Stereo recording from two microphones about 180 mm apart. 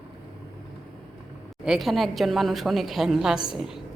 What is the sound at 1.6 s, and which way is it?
A woman's voice, centre (ahead or behind).